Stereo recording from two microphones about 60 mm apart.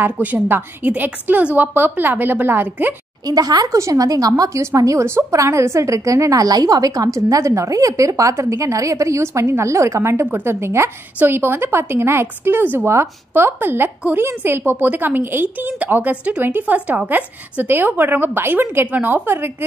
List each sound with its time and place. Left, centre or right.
0.0 s a woman's voice: right
3.3 s a woman's voice: right
4.6 s a woman's voice: right